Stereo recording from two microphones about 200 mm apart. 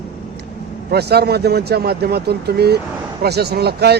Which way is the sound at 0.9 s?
55° right (ahead or behind).